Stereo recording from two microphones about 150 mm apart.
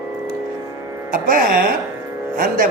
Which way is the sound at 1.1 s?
70° right (ahead or behind).